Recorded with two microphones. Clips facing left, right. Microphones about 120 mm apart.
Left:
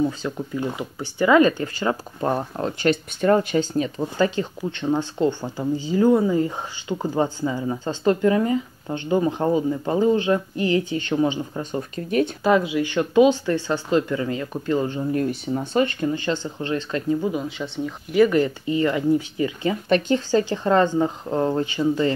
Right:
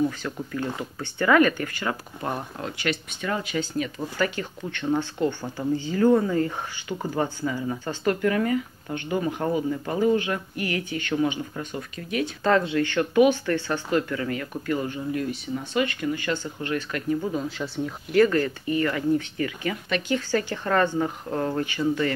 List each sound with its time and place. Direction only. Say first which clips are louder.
0.0 s speech: left 2 dB; 20° left (ahead or behind)
11.7 s speech: left 9 dB; 35° left (ahead or behind)
12.4 s speech: even; 10° left (ahead or behind)
17.5 s speech: left 1 dB; centre (ahead or behind)
18.3 s speech: left 3 dB; 20° left (ahead or behind)